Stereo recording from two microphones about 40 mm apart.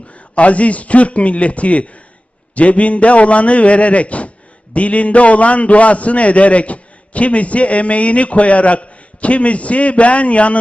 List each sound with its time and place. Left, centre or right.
0.1 s a man's voice: left